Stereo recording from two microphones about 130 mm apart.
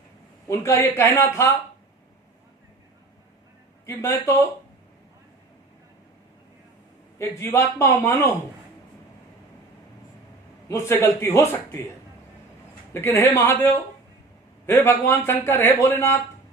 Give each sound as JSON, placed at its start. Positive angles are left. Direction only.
{"t": 0.4, "sound": "a man's voice", "side_deg": 20}
{"t": 3.8, "sound": "a man's voice", "side_deg": 20}
{"t": 7.2, "sound": "a man's voice", "side_deg": 20}
{"t": 10.7, "sound": "a man's voice", "side_deg": 20}
{"t": 12.9, "sound": "a man's voice", "side_deg": 20}